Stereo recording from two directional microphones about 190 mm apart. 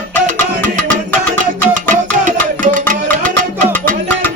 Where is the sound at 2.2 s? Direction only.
40° right (ahead or behind).